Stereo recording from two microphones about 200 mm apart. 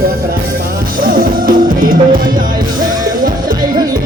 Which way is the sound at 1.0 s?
45° right (ahead or behind).